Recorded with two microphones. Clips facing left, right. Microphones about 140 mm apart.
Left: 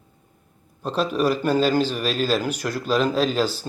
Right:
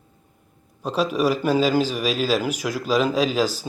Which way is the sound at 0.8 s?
5° right (ahead or behind).